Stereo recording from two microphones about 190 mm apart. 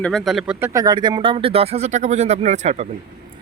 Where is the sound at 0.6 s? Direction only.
15° right (ahead or behind).